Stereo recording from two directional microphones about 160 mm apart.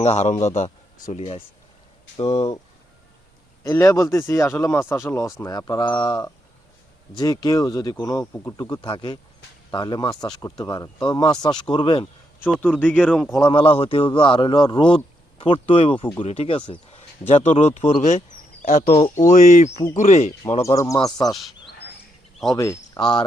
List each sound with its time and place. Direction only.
0.0 s a man's voice: 45° left (ahead or behind)
3.6 s speech: 20° left (ahead or behind)
12.5 s speech: 10° left (ahead or behind)
13.3 s a man's voice: 30° left (ahead or behind)
16.9 s a sound: 40° left (ahead or behind)
18.6 s speech: 55° left (ahead or behind)
18.9 s a man's voice: 35° left (ahead or behind)
19.2 s speech: 50° left (ahead or behind)
20.7 s speech: 20° left (ahead or behind)
22.5 s speech: 20° left (ahead or behind)
23.0 s a man's voice: 30° left (ahead or behind)